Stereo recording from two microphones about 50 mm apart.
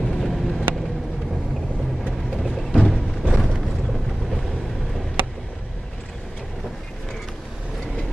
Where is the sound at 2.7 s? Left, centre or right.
Centre.